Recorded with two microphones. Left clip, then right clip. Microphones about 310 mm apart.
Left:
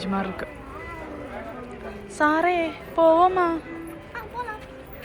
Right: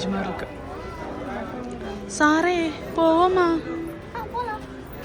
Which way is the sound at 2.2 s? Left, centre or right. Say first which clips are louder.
Right 1 dB; centre.